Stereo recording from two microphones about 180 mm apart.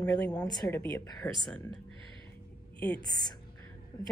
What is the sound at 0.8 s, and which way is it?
Speech, 10° left (ahead or behind).